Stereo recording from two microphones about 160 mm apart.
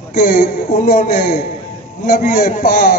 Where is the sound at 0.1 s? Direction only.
70° left (ahead or behind).